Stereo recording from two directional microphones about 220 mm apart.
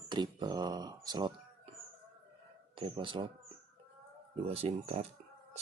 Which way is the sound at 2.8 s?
25° right (ahead or behind).